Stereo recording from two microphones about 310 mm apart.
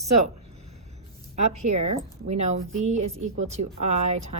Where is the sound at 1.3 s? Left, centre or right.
Right.